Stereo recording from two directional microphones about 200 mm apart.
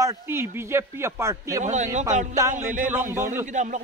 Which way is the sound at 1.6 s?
35° right (ahead or behind).